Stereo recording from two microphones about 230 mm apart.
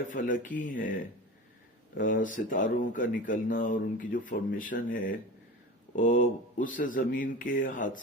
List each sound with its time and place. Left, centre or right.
0.1 s speech: left
2.0 s speech: left